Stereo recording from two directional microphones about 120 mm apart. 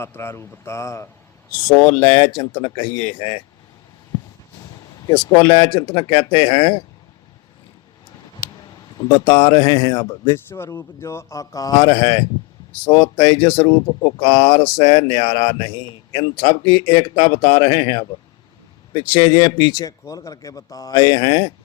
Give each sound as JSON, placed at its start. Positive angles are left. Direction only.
{"t": 0.0, "sound": "speech", "side_deg": 20}
{"t": 1.7, "sound": "speech", "side_deg": 10}
{"t": 2.1, "sound": "speech", "side_deg": 45}
{"t": 5.5, "sound": "speech", "side_deg": 45}
{"t": 9.0, "sound": "speech", "side_deg": 40}